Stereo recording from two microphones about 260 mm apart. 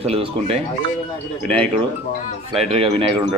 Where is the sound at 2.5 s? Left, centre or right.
Right.